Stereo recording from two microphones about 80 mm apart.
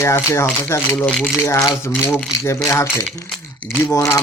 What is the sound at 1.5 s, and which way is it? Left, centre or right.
Speech, left.